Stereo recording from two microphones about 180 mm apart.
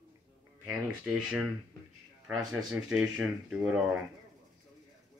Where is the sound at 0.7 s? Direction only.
5° right (ahead or behind).